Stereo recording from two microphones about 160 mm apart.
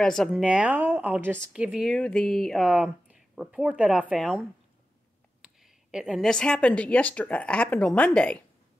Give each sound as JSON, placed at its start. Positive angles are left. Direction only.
{"t": 0.0, "sound": "a woman's voice", "side_deg": 5}